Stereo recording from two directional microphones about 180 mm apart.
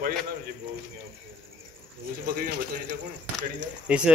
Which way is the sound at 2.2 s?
50° right (ahead or behind).